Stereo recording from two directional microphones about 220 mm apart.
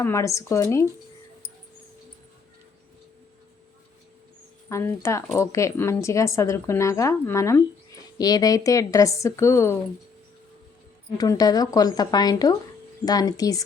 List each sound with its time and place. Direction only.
0.0 s a woman's voice: 15° left (ahead or behind)
4.7 s a woman's voice: 15° left (ahead or behind)
11.2 s a woman's voice: 15° left (ahead or behind)